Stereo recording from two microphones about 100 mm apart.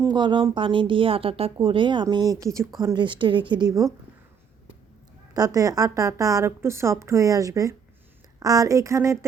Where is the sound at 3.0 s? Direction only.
55° right (ahead or behind); by 3.9 s 40° right (ahead or behind).